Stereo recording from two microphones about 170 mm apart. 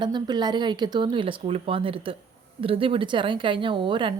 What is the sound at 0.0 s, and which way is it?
Speech, 25° right (ahead or behind).